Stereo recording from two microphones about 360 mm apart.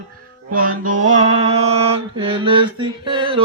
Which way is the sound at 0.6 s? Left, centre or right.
Right.